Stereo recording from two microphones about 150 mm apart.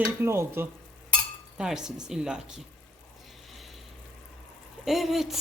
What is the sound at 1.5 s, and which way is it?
Speech, 5° right (ahead or behind).